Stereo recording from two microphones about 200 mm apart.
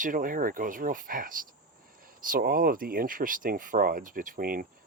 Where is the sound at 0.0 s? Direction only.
40° right (ahead or behind).